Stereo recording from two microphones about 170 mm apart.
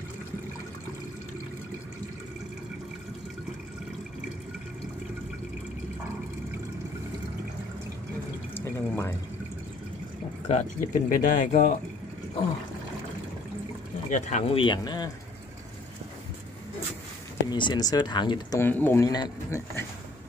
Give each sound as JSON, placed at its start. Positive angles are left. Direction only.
{"t": 8.5, "sound": "water", "side_deg": 15}
{"t": 10.4, "sound": "speech", "side_deg": 45}
{"t": 14.1, "sound": "speech", "side_deg": 45}
{"t": 14.6, "sound": "speech", "side_deg": 25}
{"t": 17.5, "sound": "speech", "side_deg": 25}
{"t": 18.6, "sound": "speech", "side_deg": 10}